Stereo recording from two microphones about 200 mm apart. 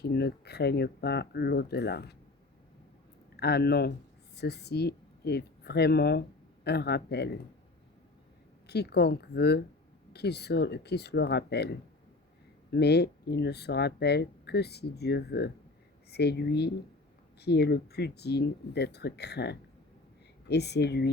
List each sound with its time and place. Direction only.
0.0 s speech: 55° left (ahead or behind)
3.3 s speech: 55° left (ahead or behind)
8.6 s speech: 55° left (ahead or behind)